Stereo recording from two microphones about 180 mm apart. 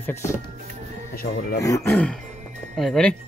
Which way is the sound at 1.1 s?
55° left (ahead or behind).